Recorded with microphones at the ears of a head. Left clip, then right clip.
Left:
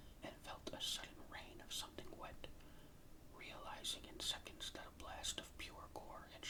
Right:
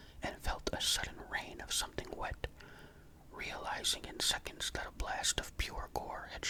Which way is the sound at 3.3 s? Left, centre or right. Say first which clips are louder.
Right 13 dB; right.